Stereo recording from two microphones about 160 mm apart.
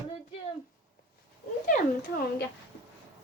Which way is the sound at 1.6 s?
55° left (ahead or behind).